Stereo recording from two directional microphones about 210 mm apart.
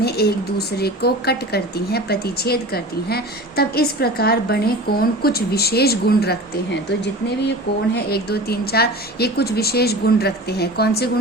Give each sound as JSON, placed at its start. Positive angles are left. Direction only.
{"t": 0.0, "sound": "speech", "side_deg": 50}